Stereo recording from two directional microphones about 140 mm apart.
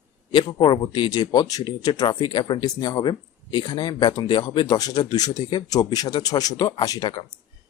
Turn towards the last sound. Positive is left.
turn(degrees=30)  # may be behind; listen again after turning